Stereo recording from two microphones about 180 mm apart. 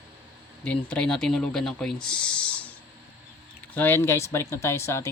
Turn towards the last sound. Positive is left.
turn(degrees=15)  # may be behind; listen again after turning